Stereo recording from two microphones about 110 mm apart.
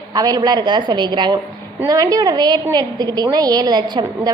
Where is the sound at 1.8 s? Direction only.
30° right (ahead or behind).